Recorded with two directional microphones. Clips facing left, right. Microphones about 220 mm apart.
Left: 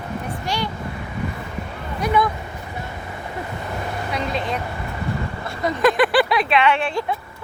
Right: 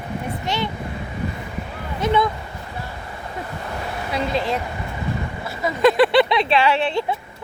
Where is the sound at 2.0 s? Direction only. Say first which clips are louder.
Right 1 dB; 25° right (ahead or behind).